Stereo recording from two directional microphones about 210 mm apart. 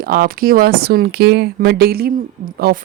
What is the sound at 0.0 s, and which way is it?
Speech, 45° right (ahead or behind).